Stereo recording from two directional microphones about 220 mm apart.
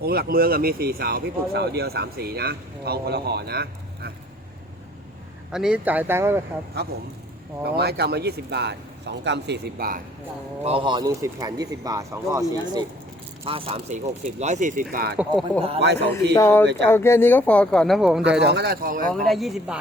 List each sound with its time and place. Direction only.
0.0 s speech: 45° right (ahead or behind)
5.5 s speech: 5° right (ahead or behind)
7.6 s speech: 45° right (ahead or behind)
10.6 s speech: 25° right (ahead or behind)
15.2 s speech: centre (ahead or behind)
15.8 s speech: 50° right (ahead or behind)
16.3 s speech: 10° left (ahead or behind)
18.2 s speech: 50° right (ahead or behind)
19.3 s speech: centre (ahead or behind)